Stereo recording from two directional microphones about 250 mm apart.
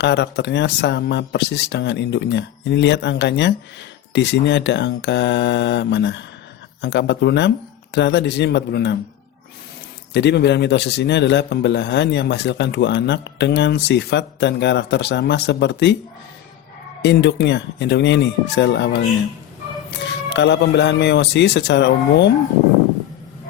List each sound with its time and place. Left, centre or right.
0.0 s a man's voice: left
10.1 s a man's voice: left
17.0 s a man's voice: left